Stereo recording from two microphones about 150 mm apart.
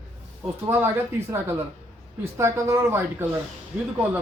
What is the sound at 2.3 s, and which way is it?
Speech, 20° right (ahead or behind).